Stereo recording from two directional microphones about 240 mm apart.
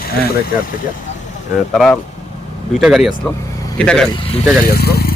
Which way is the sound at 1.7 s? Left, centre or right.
Centre.